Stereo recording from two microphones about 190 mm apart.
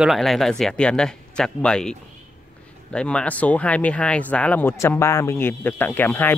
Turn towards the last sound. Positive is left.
turn(degrees=10)  # may be behind; listen again after turning